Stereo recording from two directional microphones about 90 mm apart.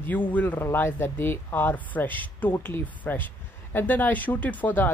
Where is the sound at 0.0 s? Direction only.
20° left (ahead or behind).